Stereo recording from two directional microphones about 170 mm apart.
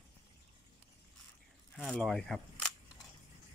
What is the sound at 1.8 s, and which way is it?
Speech, centre (ahead or behind).